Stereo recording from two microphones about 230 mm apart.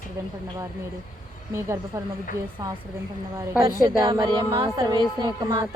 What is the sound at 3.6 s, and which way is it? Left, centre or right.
A woman's voice, centre.